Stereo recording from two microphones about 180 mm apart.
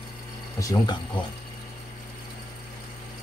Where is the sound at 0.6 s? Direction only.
20° left (ahead or behind).